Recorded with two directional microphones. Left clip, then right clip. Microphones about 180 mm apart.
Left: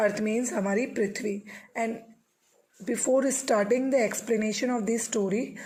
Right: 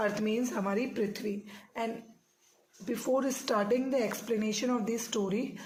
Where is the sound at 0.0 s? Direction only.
35° left (ahead or behind).